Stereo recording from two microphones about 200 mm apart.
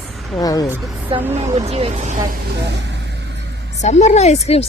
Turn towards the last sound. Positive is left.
turn(degrees=30)  # may be behind; listen again after turning